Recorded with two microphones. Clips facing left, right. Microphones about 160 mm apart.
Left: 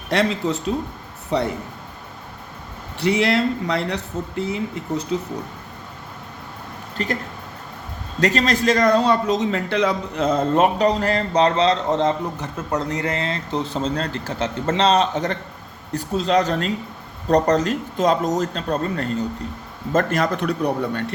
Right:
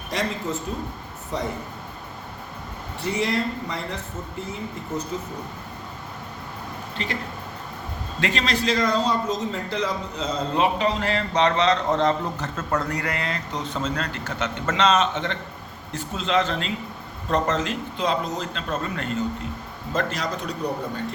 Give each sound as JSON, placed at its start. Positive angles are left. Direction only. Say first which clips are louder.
{"t": 0.1, "sound": "speech", "louder": "left 7 dB", "side_deg": 80}
{"t": 1.3, "sound": "speech", "louder": "left 7 dB", "side_deg": 70}
{"t": 3.0, "sound": "speech", "louder": "left 6 dB", "side_deg": 80}
{"t": 6.9, "sound": "speech", "louder": "left 6 dB", "side_deg": 45}
{"t": 8.2, "sound": "a man's voice", "louder": "left 6 dB", "side_deg": 40}
{"t": 19.9, "sound": "speech", "louder": "left 7 dB", "side_deg": 50}